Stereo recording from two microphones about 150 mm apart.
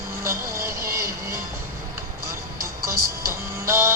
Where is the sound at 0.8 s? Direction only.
80° right.